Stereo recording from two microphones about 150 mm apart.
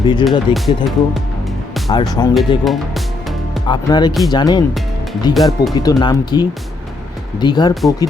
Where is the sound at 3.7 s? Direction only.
30° left (ahead or behind).